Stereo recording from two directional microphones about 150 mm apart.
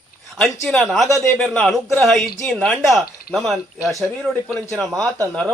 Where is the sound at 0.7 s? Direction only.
Centre (ahead or behind).